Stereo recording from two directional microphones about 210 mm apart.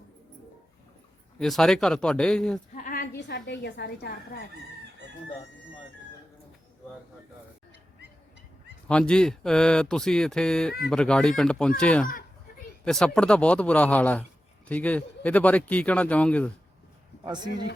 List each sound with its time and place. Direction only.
1.4 s speech: centre (ahead or behind)
2.7 s a sound: 40° left (ahead or behind)
3.2 s a woman's voice: 55° left (ahead or behind)
8.9 s speech: 5° left (ahead or behind)
17.2 s speech: 20° right (ahead or behind)